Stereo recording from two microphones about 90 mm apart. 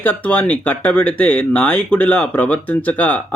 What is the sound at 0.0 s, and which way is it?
Speech, 15° left (ahead or behind).